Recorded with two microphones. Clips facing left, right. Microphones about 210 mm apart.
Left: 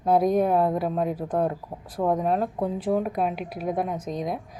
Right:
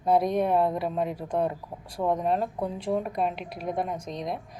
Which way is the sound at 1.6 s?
25° left (ahead or behind).